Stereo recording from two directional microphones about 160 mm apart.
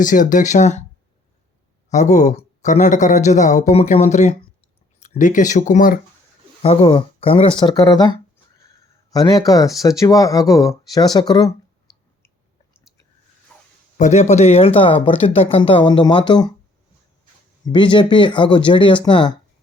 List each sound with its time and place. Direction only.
0.0 s speech: 55° left (ahead or behind)
1.9 s speech: 45° left (ahead or behind)
6.6 s speech: 35° left (ahead or behind)
7.7 s speech: 25° left (ahead or behind)
13.5 s a sound: 5° left (ahead or behind)
13.9 s speech: 50° left (ahead or behind); by 16.5 s 30° left (ahead or behind)
17.7 s speech: 30° left (ahead or behind)